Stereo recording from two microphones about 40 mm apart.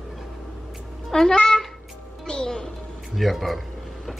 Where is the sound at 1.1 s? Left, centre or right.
Centre.